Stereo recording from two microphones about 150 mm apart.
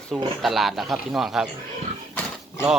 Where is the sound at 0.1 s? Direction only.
Centre (ahead or behind).